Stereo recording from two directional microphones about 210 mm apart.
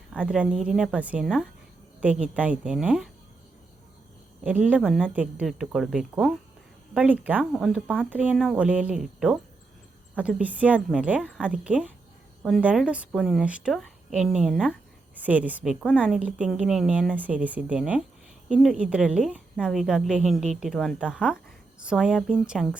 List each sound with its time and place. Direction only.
0.1 s speech: 5° right (ahead or behind)
4.4 s speech: 5° right (ahead or behind)